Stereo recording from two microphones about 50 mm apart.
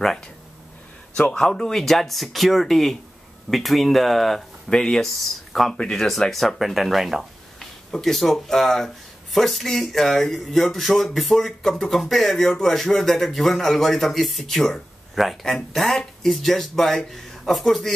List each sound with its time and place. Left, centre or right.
1.4 s speech: centre
7.5 s speech: centre